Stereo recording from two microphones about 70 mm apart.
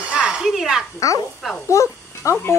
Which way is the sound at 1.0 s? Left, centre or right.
Left.